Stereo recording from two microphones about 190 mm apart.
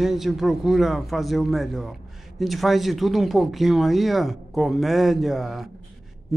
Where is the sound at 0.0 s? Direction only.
Centre (ahead or behind).